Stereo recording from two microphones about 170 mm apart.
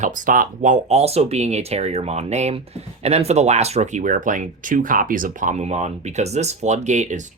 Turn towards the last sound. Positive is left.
turn(degrees=-45)  # may be behind; listen again after turning